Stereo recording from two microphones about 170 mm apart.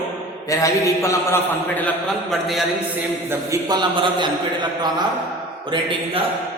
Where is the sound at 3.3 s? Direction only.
20° right (ahead or behind).